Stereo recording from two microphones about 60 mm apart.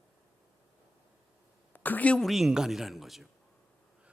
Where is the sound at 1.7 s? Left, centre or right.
Left.